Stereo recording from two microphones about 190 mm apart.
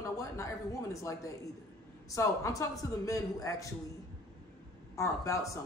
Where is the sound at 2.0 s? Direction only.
15° left (ahead or behind).